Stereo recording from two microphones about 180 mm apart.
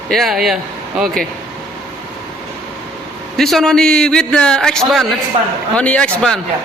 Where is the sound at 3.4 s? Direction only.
Centre (ahead or behind).